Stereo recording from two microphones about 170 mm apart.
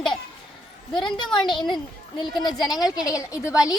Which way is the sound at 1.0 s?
30° left (ahead or behind).